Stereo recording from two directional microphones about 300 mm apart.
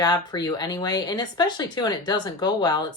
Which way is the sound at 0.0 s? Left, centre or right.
Centre.